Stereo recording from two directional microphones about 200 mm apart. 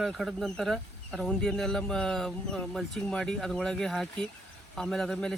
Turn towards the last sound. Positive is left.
turn(degrees=5)  # may be behind; listen again after turning